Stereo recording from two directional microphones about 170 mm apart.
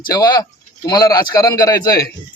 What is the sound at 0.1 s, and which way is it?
Speech, 20° left (ahead or behind).